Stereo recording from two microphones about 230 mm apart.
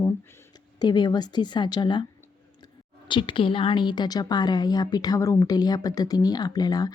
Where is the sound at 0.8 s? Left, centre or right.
Centre.